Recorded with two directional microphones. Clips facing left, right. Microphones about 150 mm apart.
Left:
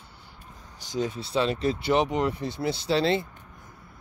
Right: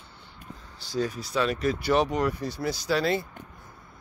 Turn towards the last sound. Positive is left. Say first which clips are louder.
# left 2 dB
turn(degrees=25)  # may be behind; listen again after turning